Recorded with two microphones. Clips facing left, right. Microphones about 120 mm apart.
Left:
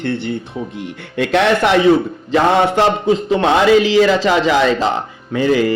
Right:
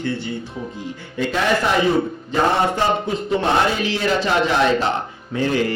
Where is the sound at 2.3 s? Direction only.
90° left.